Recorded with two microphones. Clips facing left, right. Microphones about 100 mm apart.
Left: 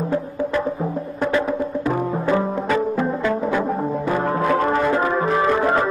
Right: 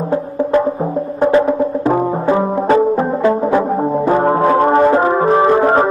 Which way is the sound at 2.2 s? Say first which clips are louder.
Right 6 dB; 25° right (ahead or behind).